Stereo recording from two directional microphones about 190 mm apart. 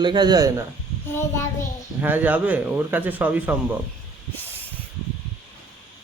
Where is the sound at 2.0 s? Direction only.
10° right (ahead or behind).